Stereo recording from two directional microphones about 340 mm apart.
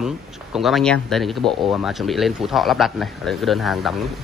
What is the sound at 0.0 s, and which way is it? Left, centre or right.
Speech, centre.